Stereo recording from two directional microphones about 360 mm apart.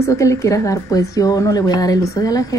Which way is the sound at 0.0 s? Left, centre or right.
Centre.